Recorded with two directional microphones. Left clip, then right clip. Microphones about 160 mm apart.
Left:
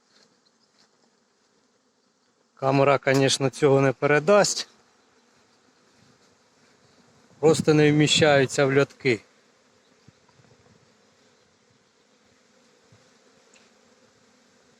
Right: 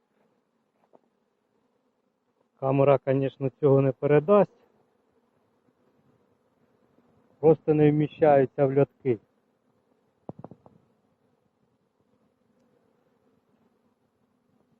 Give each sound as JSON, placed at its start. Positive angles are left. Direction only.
{"t": 2.6, "sound": "speech", "side_deg": 20}
{"t": 7.3, "sound": "speech", "side_deg": 25}